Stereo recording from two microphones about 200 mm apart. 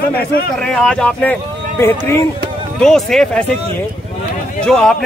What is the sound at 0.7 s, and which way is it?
Speech, 5° left (ahead or behind).